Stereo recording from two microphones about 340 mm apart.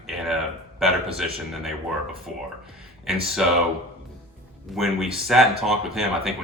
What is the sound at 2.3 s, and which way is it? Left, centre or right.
Speech, centre.